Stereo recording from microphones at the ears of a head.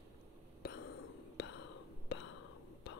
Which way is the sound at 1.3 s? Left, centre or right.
Left.